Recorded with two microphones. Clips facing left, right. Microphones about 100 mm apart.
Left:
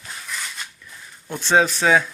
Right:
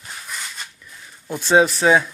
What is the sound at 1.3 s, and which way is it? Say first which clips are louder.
Speech: right 3 dB; 10° right (ahead or behind).